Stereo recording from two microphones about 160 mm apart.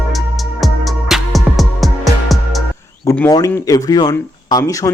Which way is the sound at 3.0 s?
10° left (ahead or behind).